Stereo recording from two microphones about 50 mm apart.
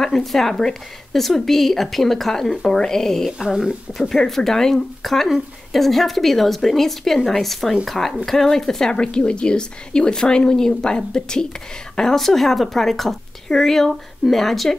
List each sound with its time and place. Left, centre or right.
0.0 s a woman's voice: centre
3.3 s speech: centre
4.1 s a woman's voice: centre
8.9 s a woman's voice: centre